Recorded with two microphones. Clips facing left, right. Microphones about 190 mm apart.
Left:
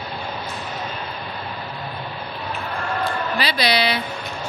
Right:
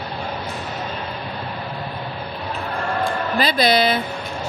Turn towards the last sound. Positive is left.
turn(degrees=-50)  # may be behind; listen again after turning